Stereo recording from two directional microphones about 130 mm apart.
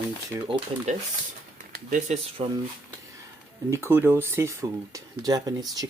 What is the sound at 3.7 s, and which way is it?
Speech, 20° right (ahead or behind).